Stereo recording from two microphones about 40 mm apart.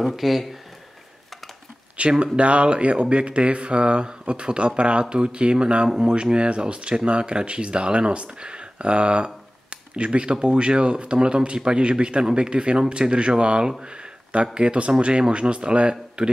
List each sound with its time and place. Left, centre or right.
0.0 s speech: centre
2.0 s speech: right